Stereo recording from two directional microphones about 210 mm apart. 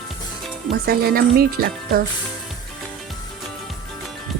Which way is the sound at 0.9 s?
45° right (ahead or behind).